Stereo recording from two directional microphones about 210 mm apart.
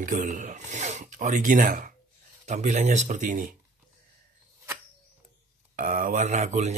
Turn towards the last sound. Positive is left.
turn(degrees=-30)  # may be behind; listen again after turning